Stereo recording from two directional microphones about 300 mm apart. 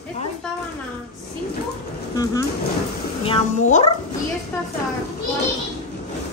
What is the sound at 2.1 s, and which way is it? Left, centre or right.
A child's voice, centre.